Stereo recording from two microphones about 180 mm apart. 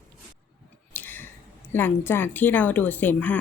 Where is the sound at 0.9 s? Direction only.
10° left (ahead or behind).